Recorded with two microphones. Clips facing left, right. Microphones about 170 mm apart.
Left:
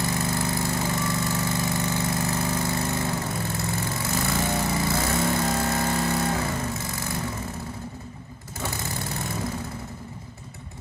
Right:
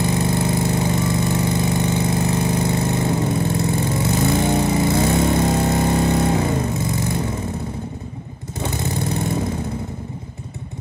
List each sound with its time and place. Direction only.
0.0 s lawn mower: 20° right (ahead or behind)
8.5 s vehicle: 20° right (ahead or behind)